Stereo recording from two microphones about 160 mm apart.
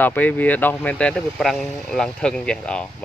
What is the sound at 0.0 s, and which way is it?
Speech, 10° left (ahead or behind).